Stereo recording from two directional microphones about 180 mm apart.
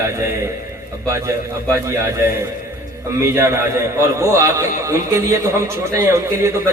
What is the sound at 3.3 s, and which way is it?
A man's voice, 15° right (ahead or behind).